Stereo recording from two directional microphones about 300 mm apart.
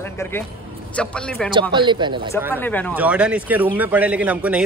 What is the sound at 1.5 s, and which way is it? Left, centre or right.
Speech, centre.